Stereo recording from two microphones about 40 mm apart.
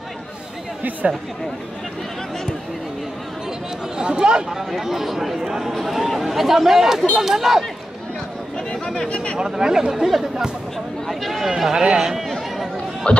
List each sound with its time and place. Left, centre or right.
1.0 s speech: right
4.0 s speech: right
4.6 s speech: centre
8.8 s speech: centre
9.1 s speech: left
9.4 s speech: centre
11.7 s speech: centre
13.0 s speech: left